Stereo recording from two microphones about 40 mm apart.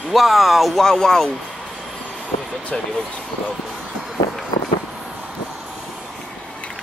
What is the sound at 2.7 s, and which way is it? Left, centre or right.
Speech, left.